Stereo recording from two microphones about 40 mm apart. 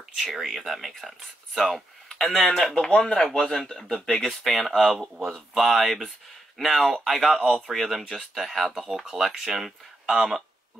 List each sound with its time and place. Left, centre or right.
0.3 s speech: centre
2.7 s speech: left
3.2 s speech: centre